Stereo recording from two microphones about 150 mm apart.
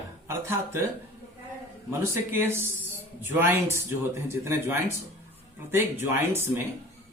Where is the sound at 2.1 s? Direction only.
15° right (ahead or behind).